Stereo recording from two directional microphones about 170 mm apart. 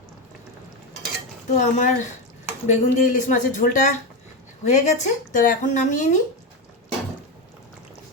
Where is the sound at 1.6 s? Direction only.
50° left (ahead or behind).